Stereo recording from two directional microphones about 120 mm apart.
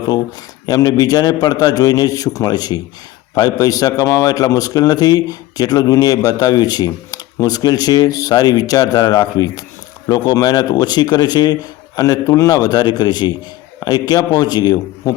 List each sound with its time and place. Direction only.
0.6 s a man's voice: 30° left (ahead or behind)